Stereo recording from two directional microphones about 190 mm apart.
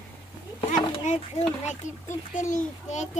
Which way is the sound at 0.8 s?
35° left (ahead or behind).